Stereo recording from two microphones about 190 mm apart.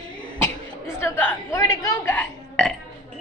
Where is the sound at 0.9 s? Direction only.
10° left (ahead or behind).